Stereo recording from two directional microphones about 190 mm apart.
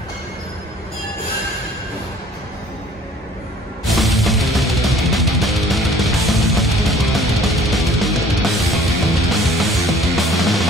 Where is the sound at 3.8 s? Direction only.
Centre (ahead or behind).